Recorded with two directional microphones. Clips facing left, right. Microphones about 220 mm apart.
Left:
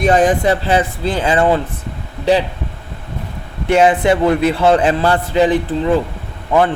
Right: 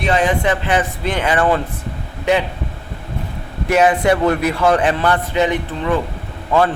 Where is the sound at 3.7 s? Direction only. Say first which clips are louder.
Left 2 dB; 30° left (ahead or behind).